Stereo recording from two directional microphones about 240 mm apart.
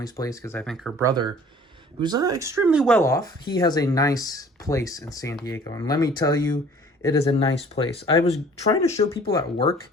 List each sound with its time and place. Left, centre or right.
0.0 s speech: centre
1.0 s speech: centre